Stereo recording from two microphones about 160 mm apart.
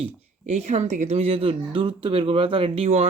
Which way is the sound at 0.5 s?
45° right (ahead or behind).